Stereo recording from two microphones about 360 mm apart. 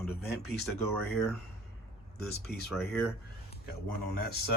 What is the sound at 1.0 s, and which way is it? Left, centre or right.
Speech, centre.